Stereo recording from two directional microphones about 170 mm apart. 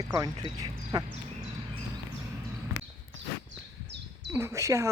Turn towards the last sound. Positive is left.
turn(degrees=-15)  # may be behind; listen again after turning